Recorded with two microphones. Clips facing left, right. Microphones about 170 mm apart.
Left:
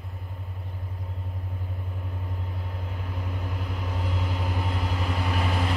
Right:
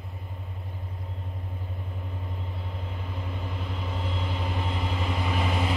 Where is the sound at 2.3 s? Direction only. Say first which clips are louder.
Left 1 dB; 5° left (ahead or behind).